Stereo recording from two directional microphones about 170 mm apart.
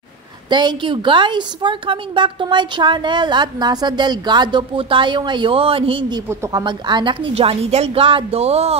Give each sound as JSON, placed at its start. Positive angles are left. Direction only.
{"t": 0.5, "sound": "a woman's voice", "side_deg": -25}
{"t": 6.2, "sound": "speech", "side_deg": -15}
{"t": 6.6, "sound": "a woman's voice", "side_deg": -25}